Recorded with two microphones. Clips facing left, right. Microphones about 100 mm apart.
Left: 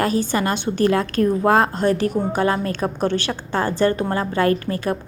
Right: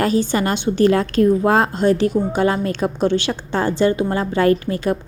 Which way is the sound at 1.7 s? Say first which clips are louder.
Right 3 dB; 45° left (ahead or behind).